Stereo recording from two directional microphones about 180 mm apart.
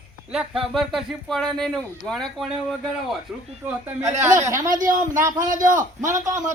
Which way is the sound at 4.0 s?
40° right (ahead or behind).